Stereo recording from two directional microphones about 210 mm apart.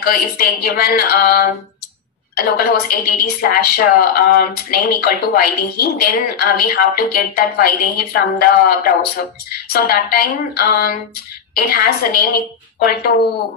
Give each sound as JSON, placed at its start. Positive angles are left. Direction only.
{"t": 0.0, "sound": "a woman's voice", "side_deg": 45}